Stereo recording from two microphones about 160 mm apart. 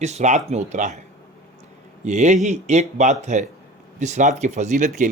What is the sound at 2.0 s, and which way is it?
Speech, 45° right (ahead or behind).